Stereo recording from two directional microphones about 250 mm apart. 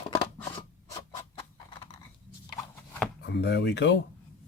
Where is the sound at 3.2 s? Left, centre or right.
Left.